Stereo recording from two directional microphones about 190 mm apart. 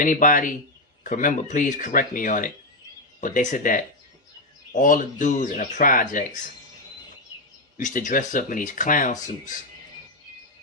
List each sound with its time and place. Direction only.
0.0 s speech: 45° left (ahead or behind)
7.8 s speech: 40° left (ahead or behind)